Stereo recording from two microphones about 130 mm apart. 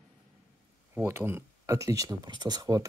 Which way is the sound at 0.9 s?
15° right (ahead or behind).